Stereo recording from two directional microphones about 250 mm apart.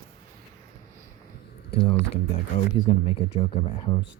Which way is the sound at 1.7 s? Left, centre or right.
Left.